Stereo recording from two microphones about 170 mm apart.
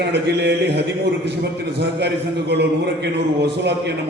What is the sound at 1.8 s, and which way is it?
A man's voice, 85° right.